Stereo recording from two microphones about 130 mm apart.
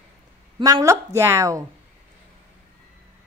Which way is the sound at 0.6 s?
25° right (ahead or behind).